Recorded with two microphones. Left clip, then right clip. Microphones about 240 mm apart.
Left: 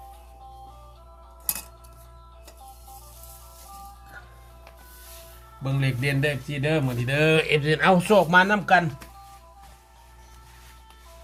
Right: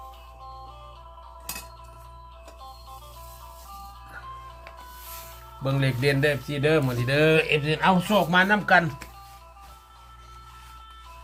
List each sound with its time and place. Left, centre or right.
5.6 s a man's voice: centre
7.4 s a man's voice: centre
8.3 s speech: centre